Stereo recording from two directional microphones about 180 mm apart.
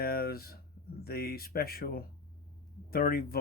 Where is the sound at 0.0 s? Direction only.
60° left (ahead or behind).